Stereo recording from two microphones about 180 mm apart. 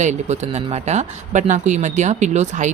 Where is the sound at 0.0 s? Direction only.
40° right (ahead or behind).